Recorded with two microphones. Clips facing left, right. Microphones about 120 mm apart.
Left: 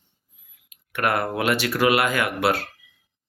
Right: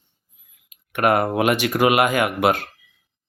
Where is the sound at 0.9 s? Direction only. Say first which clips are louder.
Right 5 dB; 20° right (ahead or behind).